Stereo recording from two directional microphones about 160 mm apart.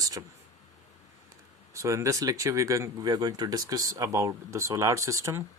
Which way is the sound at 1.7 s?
20° right (ahead or behind).